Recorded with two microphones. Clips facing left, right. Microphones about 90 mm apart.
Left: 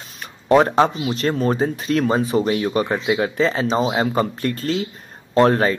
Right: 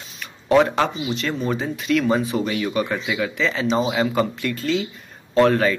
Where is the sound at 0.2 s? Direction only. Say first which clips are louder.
Left 2 dB; 35° left (ahead or behind).